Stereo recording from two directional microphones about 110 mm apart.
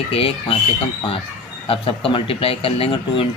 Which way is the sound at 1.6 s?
55° left (ahead or behind).